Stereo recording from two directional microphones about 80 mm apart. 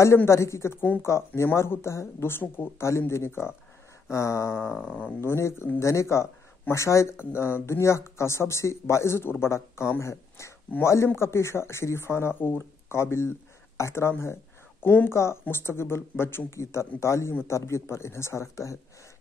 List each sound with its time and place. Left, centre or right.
0.0 s speech: left
4.8 s speech: centre
5.2 s speech: left